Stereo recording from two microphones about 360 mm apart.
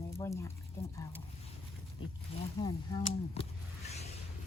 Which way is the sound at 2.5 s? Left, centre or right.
Centre.